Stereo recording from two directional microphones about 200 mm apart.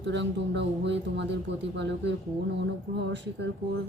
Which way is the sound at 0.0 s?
60° right (ahead or behind).